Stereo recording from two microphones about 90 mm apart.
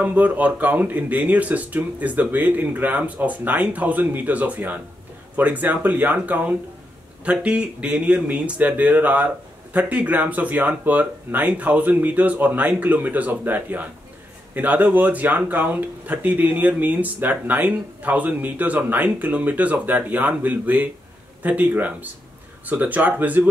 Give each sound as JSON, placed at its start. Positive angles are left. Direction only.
{"t": 0.0, "sound": "speech", "side_deg": -15}